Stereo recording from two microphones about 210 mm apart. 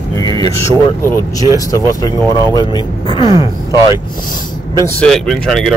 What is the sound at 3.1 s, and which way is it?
Speech, 25° left (ahead or behind).